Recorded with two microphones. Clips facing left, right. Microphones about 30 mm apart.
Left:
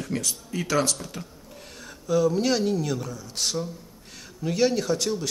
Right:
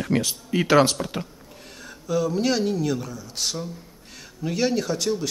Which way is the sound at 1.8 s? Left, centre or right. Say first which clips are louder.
Left 1 dB; centre.